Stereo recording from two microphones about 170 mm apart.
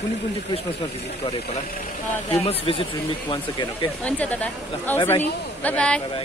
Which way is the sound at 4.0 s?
10° left (ahead or behind).